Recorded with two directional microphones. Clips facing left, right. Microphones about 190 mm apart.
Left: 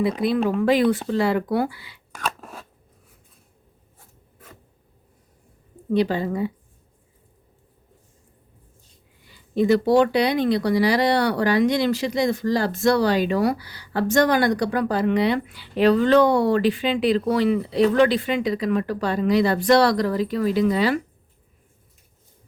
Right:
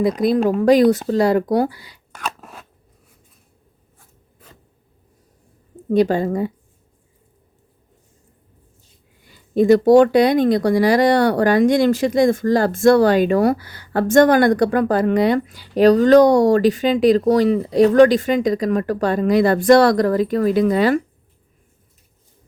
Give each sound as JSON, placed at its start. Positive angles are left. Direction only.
{"t": 0.4, "sound": "speech", "side_deg": -40}
{"t": 2.2, "sound": "scissors", "side_deg": -5}
{"t": 5.9, "sound": "speech", "side_deg": -45}
{"t": 9.2, "sound": "speech", "side_deg": -45}